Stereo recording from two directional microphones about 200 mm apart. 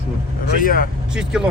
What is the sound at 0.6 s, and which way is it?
Speech, 45° left (ahead or behind).